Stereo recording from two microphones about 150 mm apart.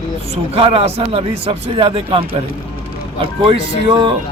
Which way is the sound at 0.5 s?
40° right (ahead or behind).